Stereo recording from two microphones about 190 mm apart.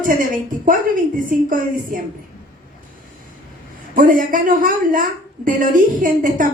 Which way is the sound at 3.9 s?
45° right (ahead or behind).